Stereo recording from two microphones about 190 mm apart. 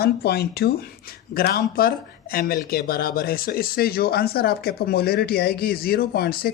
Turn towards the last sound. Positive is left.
turn(degrees=55)  # may be behind; listen again after turning